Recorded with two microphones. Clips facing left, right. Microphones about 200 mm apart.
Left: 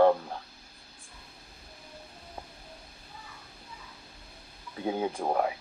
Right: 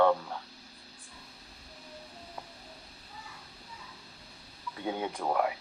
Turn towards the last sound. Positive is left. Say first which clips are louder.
# left 3 dB
turn(degrees=30)  # may be behind; listen again after turning